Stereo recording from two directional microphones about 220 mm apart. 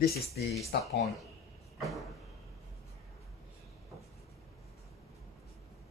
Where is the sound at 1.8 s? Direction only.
Centre (ahead or behind).